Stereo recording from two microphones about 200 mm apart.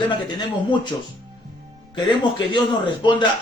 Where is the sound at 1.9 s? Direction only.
25° left (ahead or behind).